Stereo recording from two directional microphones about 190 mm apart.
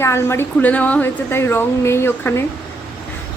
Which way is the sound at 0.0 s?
15° left (ahead or behind).